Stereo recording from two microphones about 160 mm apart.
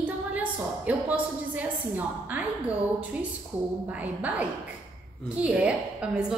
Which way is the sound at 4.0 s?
10° right (ahead or behind).